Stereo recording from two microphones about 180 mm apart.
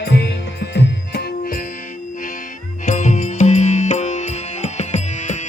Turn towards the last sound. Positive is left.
turn(degrees=40)  # may be behind; listen again after turning